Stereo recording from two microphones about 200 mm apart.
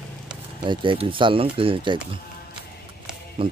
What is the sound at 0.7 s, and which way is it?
Speech, 25° right (ahead or behind).